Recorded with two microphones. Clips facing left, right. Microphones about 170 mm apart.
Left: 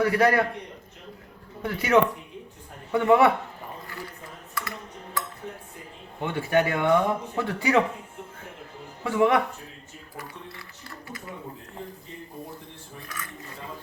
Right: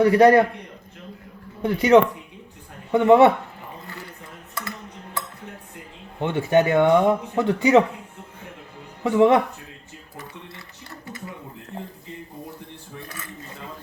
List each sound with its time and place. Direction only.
0.0 s speech: 25° right (ahead or behind)
1.6 s speech: 20° right (ahead or behind)
6.1 s speech: 20° right (ahead or behind)
9.0 s speech: 25° right (ahead or behind)